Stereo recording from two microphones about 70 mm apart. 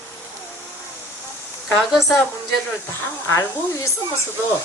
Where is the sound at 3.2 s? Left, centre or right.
Left.